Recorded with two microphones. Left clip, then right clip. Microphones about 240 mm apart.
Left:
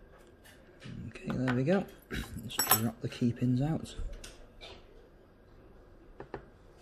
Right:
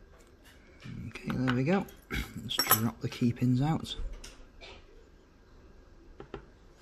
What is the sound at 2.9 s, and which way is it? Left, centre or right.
Speech, centre.